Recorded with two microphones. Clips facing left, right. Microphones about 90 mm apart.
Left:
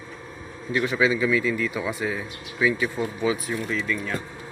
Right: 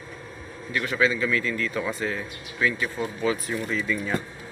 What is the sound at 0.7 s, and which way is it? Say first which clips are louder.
A man's voice: left 2 dB; 15° left (ahead or behind).